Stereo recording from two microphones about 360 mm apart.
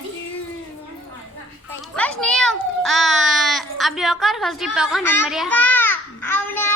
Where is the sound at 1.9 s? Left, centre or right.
Centre.